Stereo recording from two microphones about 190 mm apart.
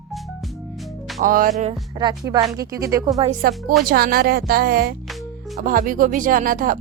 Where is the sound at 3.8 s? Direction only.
50° right (ahead or behind).